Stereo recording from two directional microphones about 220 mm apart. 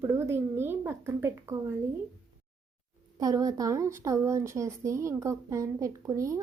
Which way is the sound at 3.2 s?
15° right (ahead or behind).